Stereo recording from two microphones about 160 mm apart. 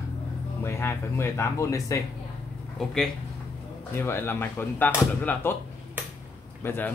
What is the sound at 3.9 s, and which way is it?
Speech, 15° left (ahead or behind).